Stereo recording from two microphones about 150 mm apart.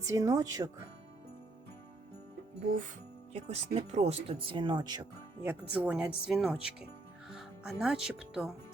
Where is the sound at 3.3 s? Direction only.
45° right (ahead or behind); by 5.1 s 30° right (ahead or behind).